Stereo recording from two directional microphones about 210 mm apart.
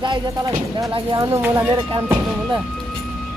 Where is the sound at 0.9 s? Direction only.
20° right (ahead or behind).